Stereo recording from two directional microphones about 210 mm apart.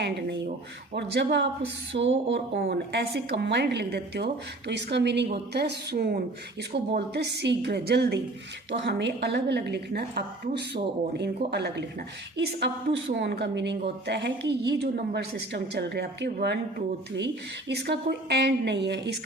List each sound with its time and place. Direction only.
0.9 s a woman's voice: 55° right (ahead or behind)